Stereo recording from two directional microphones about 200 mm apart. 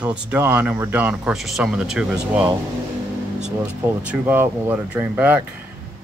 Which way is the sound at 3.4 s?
5° right (ahead or behind).